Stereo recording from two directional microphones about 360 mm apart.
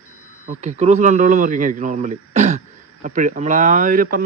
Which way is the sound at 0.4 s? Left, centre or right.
Centre.